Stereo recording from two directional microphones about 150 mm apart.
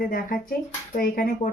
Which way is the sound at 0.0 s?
75° left (ahead or behind).